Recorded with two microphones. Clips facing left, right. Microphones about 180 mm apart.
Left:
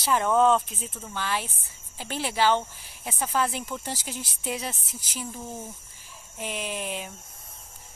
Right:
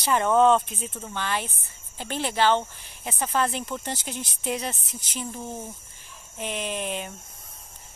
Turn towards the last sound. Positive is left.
turn(degrees=5)  # may be behind; listen again after turning